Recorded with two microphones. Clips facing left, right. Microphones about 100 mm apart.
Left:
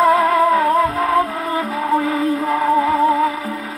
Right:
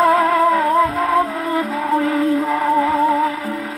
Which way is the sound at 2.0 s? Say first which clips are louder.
Right 2 dB; 15° left (ahead or behind).